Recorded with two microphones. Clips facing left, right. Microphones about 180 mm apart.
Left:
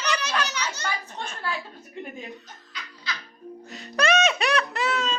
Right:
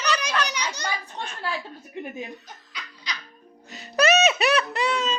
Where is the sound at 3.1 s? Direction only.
15° right (ahead or behind).